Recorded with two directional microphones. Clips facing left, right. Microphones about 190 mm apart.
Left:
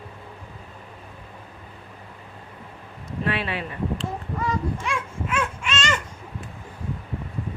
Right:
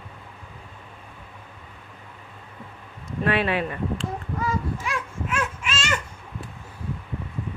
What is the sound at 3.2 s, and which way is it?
Speech, 55° right (ahead or behind).